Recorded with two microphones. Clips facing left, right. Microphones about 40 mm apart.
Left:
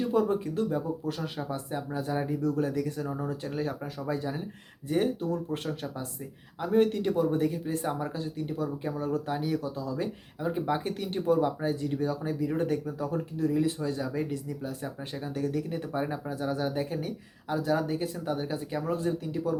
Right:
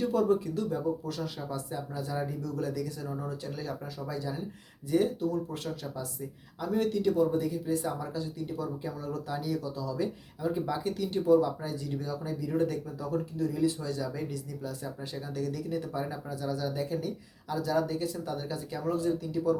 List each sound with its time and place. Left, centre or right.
0.1 s speech: left